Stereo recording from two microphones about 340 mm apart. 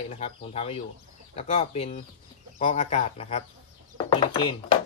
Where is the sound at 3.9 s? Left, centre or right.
Centre.